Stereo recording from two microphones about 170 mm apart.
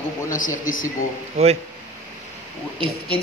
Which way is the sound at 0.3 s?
50° left (ahead or behind).